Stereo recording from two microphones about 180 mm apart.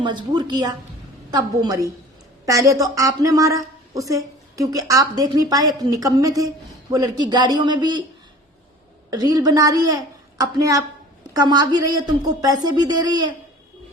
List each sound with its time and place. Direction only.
0.0 s a woman's voice: 25° right (ahead or behind)
9.0 s a woman's voice: 20° right (ahead or behind)